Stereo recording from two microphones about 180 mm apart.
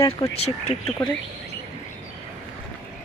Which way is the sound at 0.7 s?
30° left (ahead or behind).